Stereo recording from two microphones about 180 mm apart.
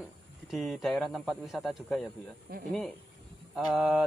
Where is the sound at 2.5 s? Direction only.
55° right (ahead or behind).